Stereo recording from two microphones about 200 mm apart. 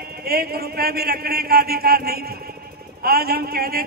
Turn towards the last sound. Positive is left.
turn(degrees=-50)  # may be behind; listen again after turning